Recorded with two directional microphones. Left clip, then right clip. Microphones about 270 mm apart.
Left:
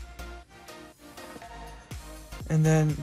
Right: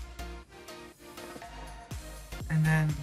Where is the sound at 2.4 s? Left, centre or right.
Centre.